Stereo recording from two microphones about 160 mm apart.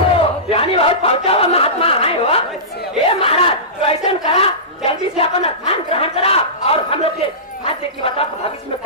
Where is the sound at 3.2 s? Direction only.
35° left (ahead or behind).